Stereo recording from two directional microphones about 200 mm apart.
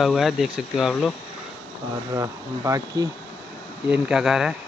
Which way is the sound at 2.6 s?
15° right (ahead or behind).